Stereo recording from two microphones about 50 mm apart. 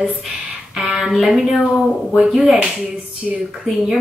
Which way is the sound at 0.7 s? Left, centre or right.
Centre.